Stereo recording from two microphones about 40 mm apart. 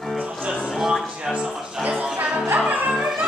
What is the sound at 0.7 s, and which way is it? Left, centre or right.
Music, centre.